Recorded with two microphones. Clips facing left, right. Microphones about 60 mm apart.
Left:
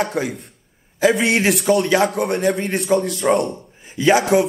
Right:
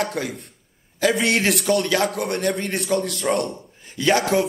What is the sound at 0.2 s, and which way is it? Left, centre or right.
A man's voice, centre.